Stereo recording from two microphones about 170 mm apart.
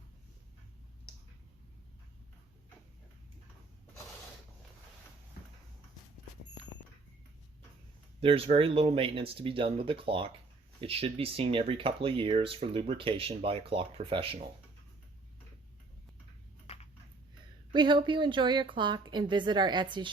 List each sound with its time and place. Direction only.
8.2 s speech: 35° right (ahead or behind)
16.7 s a sound: 40° left (ahead or behind)
17.7 s a woman's voice: 30° right (ahead or behind)